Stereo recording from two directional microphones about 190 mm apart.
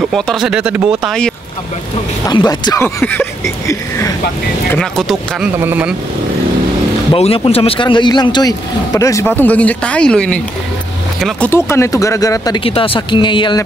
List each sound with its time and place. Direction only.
0.1 s speech: centre (ahead or behind)
2.2 s speech: 20° left (ahead or behind)
4.7 s speech: centre (ahead or behind)
7.1 s speech: 30° left (ahead or behind); by 11.5 s centre (ahead or behind)
11.5 s speech: 15° left (ahead or behind)